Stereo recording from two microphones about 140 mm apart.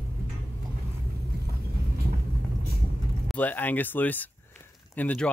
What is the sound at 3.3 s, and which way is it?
Speech, 10° left (ahead or behind).